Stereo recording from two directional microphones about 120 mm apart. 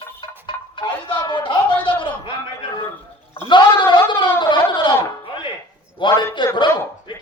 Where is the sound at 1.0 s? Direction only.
40° left (ahead or behind).